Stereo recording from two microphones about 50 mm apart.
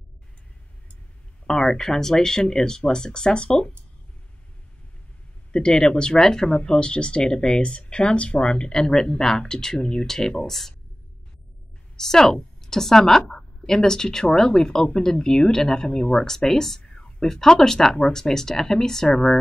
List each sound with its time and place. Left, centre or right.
1.5 s speech: centre
5.5 s speech: centre
12.0 s a woman's voice: centre